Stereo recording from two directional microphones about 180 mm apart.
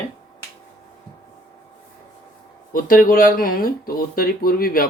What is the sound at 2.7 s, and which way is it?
Speech, 50° left (ahead or behind).